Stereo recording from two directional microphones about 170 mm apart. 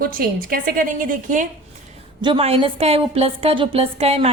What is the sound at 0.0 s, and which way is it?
A woman's voice, 60° right (ahead or behind).